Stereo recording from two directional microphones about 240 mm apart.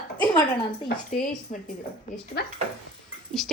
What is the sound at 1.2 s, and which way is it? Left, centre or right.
Speech, centre.